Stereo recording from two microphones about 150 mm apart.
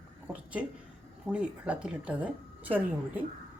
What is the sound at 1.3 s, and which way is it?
Speech, 10° right (ahead or behind).